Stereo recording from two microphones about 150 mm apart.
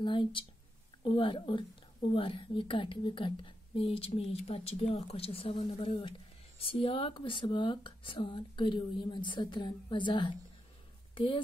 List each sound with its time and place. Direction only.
0.0 s a woman's voice: 35° left (ahead or behind)